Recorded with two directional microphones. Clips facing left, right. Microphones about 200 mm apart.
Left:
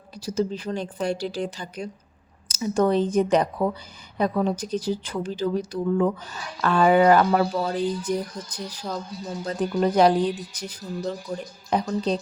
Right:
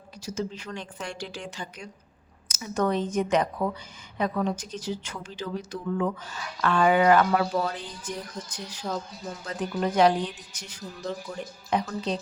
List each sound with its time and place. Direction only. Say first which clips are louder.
0.3 s speech: left 7 dB; 35° left (ahead or behind)
8.8 s speech: right 1 dB; centre (ahead or behind)
9.4 s speech: left 6 dB; 35° left (ahead or behind)
11.3 s speech: left 4 dB; 25° left (ahead or behind)
11.9 s speech: left 5 dB; 35° left (ahead or behind)